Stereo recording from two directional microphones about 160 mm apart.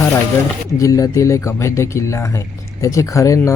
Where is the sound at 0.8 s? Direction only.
20° left (ahead or behind).